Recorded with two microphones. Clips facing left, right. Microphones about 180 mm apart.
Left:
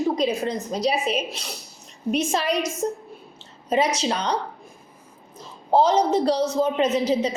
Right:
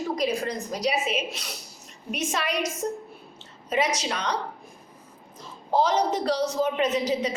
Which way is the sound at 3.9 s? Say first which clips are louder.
Left 4 dB; 30° left (ahead or behind).